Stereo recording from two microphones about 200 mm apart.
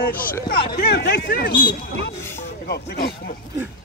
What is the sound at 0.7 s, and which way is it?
Speech, 55° left (ahead or behind).